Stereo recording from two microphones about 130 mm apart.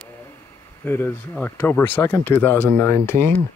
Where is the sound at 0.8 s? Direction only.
15° left (ahead or behind).